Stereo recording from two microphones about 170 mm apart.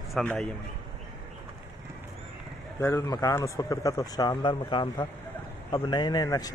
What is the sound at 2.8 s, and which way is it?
Speech, 20° left (ahead or behind).